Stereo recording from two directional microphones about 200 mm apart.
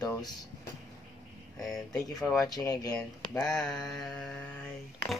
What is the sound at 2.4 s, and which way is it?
Speech, 15° left (ahead or behind).